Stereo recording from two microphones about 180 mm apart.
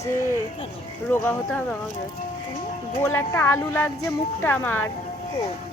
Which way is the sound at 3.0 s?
15° left (ahead or behind).